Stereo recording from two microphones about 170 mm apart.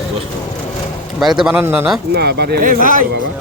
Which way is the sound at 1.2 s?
Centre (ahead or behind).